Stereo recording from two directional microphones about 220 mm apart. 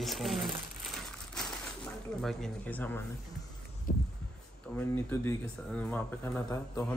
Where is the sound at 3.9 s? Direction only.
40° left (ahead or behind).